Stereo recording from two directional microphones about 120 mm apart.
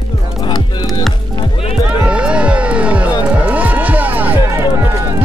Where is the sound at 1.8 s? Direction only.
10° right (ahead or behind).